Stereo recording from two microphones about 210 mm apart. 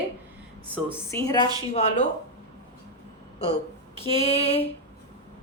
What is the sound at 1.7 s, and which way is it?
Speech, 35° left (ahead or behind).